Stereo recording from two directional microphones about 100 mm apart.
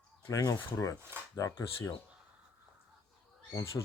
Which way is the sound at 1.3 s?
35° left (ahead or behind).